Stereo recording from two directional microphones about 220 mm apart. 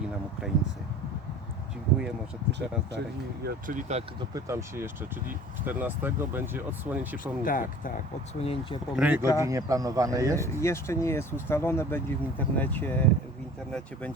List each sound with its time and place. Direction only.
2.5 s speech: 50° right (ahead or behind)
3.4 s speech: 35° right (ahead or behind)
4.4 s speech: 15° right (ahead or behind)
7.4 s speech: 40° left (ahead or behind)
8.4 s speech: 25° left (ahead or behind)
9.0 s speech: 5° right (ahead or behind)
10.3 s speech: 10° left (ahead or behind)